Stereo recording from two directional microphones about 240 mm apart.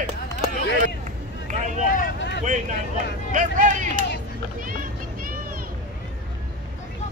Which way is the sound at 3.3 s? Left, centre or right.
Right.